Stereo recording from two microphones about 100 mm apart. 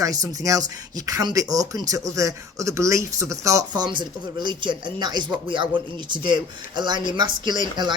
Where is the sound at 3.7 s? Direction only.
50° right (ahead or behind).